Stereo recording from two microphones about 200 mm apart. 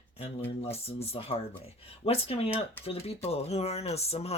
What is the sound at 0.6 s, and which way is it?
Speech, 30° left (ahead or behind).